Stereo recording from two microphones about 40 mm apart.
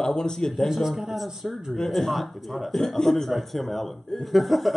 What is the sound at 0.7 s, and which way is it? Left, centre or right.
Speech, centre.